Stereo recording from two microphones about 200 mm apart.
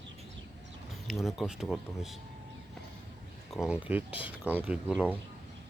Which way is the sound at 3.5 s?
5° right (ahead or behind).